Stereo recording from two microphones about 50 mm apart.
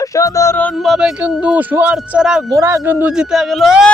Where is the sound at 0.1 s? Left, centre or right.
Left.